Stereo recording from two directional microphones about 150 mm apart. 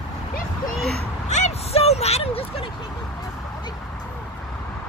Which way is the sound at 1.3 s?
45° left (ahead or behind).